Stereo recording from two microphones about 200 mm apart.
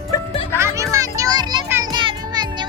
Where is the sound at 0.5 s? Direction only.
15° right (ahead or behind).